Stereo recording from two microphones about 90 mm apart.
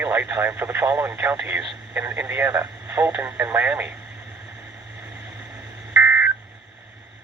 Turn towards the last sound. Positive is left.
turn(degrees=-25)  # may be behind; listen again after turning